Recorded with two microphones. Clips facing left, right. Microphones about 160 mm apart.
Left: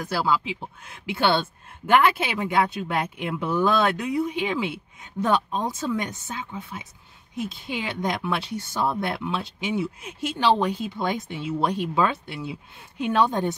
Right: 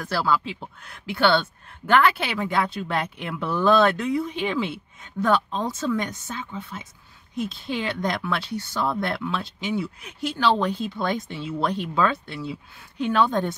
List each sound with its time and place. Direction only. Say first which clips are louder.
0.1 s speech: right 1 dB; 15° left (ahead or behind)